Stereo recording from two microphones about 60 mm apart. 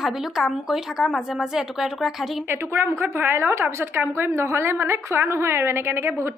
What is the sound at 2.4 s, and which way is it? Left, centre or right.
A woman's voice, right.